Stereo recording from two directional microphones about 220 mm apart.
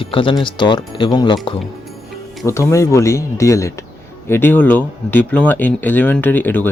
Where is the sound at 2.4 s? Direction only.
15° left (ahead or behind).